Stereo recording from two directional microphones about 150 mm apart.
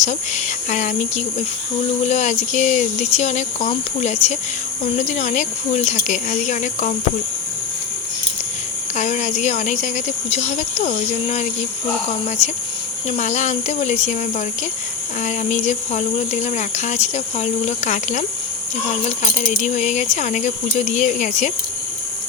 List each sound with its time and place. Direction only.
0.0 s speech: 50° left (ahead or behind)
9.0 s speech: 55° left (ahead or behind)
19.5 s speech: 50° left (ahead or behind)